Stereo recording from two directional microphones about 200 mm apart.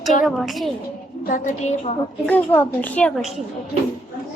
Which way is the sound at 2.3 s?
10° left (ahead or behind).